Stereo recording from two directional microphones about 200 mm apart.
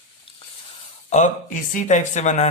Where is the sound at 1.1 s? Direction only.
40° left (ahead or behind).